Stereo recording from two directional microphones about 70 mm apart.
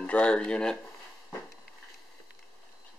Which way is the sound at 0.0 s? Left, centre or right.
Centre.